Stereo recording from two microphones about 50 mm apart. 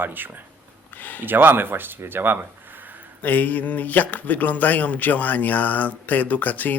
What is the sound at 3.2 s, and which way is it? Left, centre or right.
Speech, left.